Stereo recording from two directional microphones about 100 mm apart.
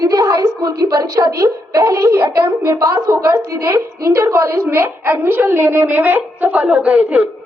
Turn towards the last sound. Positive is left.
turn(degrees=-15)  # may be behind; listen again after turning